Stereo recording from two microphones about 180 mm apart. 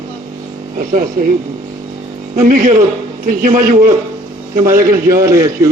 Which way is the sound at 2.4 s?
50° right (ahead or behind).